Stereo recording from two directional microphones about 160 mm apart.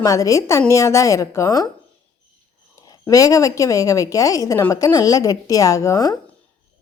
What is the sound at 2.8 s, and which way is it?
A woman's voice, 20° left (ahead or behind).